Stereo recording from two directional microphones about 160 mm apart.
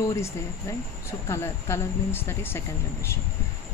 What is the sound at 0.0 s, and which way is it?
Speech, 20° left (ahead or behind).